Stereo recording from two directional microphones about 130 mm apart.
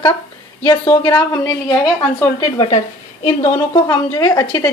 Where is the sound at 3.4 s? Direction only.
20° left (ahead or behind).